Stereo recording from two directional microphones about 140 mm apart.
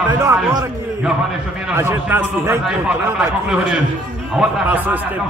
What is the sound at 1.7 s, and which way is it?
Speech, 20° right (ahead or behind).